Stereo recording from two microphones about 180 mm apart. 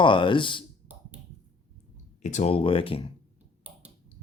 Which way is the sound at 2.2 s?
40° left (ahead or behind).